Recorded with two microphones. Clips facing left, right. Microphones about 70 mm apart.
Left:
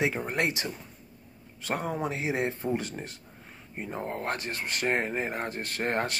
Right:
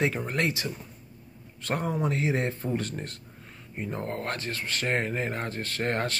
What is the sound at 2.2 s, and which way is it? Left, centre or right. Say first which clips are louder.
Speech: right 2 dB; centre.